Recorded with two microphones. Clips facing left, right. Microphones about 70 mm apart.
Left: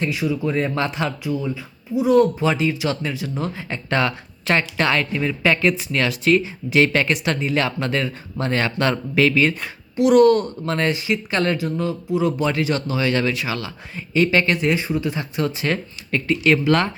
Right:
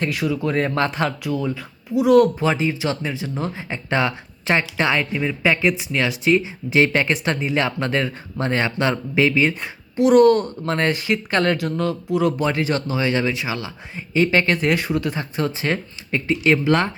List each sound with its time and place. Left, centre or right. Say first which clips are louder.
0.0 s speech: even; right
0.7 s speech: right 2 dB; right
1.2 s speech: right 1 dB; right
2.4 s speech: even; right
3.7 s speech: even; right
10.0 s speech: even; right
11.5 s speech: right 1 dB; right
12.4 s speech: even; right
15.1 s speech: even; right